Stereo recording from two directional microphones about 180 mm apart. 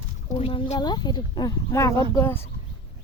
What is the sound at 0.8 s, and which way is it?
Speech, 25° left (ahead or behind).